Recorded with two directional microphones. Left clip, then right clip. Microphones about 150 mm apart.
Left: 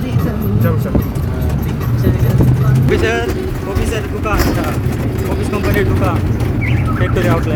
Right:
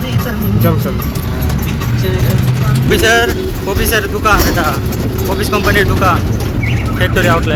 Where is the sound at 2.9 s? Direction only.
Centre (ahead or behind).